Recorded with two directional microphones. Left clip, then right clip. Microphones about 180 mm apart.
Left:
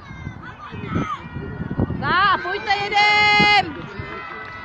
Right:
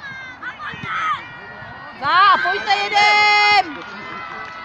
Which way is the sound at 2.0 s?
55° right (ahead or behind).